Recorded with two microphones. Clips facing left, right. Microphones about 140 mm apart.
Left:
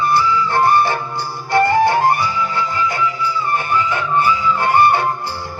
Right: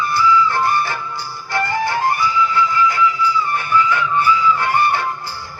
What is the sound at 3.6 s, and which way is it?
Music, 20° left (ahead or behind).